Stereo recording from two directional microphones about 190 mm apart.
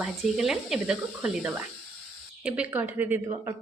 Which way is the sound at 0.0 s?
Centre (ahead or behind).